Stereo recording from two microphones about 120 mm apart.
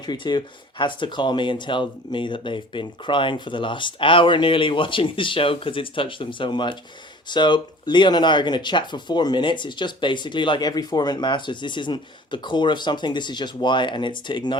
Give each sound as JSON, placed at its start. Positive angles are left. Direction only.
{"t": 0.0, "sound": "speech", "side_deg": 40}